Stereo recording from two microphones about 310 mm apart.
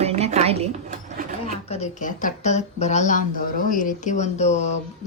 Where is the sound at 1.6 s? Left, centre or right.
Left.